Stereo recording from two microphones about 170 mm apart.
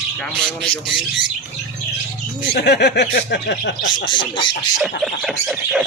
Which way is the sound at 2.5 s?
85° left.